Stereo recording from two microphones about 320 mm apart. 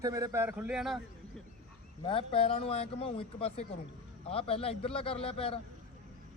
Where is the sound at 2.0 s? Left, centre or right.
Centre.